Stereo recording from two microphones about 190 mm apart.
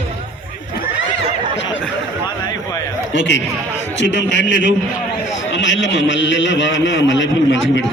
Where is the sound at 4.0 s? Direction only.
70° left (ahead or behind).